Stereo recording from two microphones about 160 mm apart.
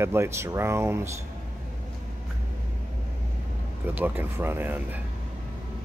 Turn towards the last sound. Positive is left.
turn(degrees=-10)  # may be behind; listen again after turning